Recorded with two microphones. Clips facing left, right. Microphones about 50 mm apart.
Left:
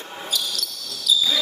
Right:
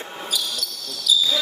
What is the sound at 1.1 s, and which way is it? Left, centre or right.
Basketball bounce, centre.